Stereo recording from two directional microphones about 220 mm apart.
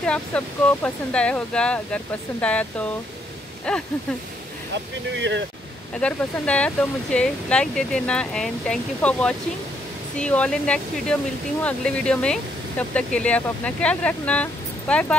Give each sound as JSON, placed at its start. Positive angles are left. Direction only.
{"t": 0.0, "sound": "speech", "side_deg": 5}
{"t": 5.1, "sound": "speech", "side_deg": -55}
{"t": 5.9, "sound": "speech", "side_deg": 5}